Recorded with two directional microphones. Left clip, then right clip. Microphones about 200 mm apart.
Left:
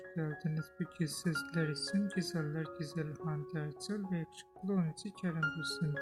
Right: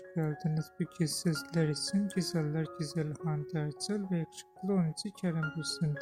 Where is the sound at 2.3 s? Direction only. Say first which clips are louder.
Right 4 dB; 25° right (ahead or behind).